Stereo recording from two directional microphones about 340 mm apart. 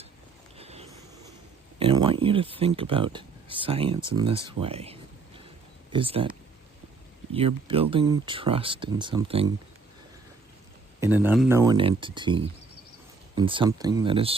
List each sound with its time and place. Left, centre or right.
0.5 s a sound: centre
1.8 s speech: centre
7.3 s speech: centre
11.0 s speech: centre